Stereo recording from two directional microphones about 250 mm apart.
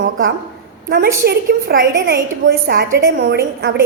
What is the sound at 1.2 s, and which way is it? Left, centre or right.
A woman's voice, right.